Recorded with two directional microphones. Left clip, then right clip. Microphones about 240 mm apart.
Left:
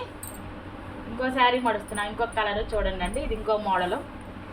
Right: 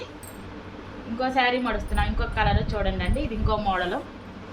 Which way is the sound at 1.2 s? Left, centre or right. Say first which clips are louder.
Left 1 dB; centre.